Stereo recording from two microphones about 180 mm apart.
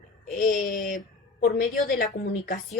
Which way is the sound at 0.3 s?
45° left (ahead or behind).